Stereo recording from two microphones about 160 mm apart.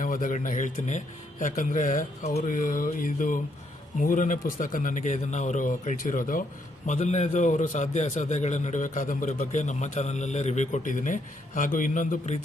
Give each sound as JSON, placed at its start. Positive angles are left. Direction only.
{"t": 0.0, "sound": "a man's voice", "side_deg": 55}
{"t": 6.8, "sound": "a man's voice", "side_deg": 50}